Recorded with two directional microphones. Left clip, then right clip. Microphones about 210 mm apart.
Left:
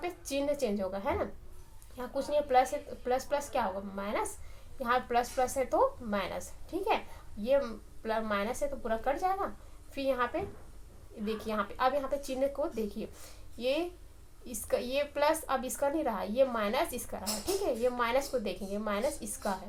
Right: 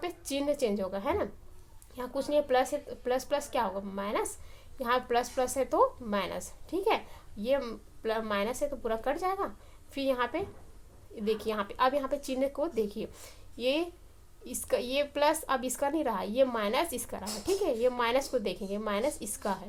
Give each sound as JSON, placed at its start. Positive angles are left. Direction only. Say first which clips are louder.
{"t": 0.0, "sound": "a woman's voice", "louder": "even", "side_deg": -50}